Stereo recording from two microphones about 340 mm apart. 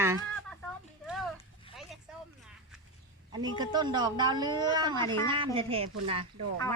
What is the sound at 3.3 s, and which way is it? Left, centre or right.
Speech, centre.